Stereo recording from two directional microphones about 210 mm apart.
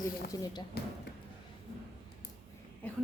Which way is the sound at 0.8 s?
50° left (ahead or behind).